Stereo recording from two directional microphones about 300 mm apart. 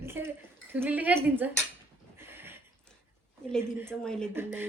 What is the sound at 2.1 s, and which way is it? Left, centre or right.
Horse, centre.